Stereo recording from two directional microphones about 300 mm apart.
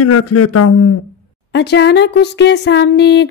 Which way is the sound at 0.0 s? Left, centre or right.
Left.